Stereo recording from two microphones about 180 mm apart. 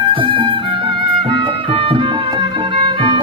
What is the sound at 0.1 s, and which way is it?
Music, 30° right (ahead or behind).